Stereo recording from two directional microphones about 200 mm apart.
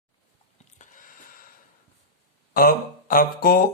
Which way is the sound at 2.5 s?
45° left (ahead or behind).